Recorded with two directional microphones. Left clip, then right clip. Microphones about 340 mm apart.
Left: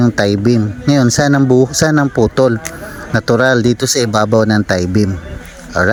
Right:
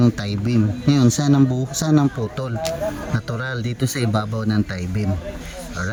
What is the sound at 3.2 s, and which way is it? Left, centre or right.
Speech, centre.